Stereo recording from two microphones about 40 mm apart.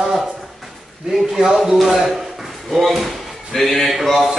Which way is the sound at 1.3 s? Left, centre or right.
Centre.